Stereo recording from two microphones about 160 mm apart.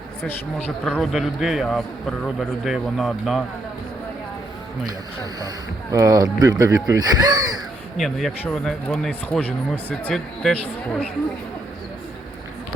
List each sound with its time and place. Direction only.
0.3 s a man's voice: 5° left (ahead or behind)
5.9 s speech: 20° right (ahead or behind)
7.9 s a man's voice: centre (ahead or behind)